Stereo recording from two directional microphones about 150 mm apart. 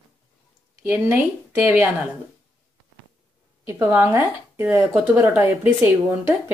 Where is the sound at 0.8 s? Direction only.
10° right (ahead or behind).